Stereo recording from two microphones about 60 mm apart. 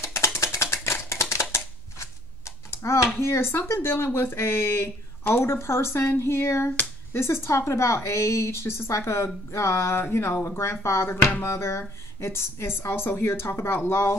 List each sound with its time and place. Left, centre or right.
0.0 s a sound: left
1.3 s shuffling cards: left
3.2 s a woman's voice: left